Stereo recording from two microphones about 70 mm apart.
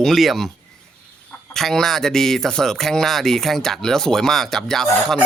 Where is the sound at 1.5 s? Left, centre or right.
Centre.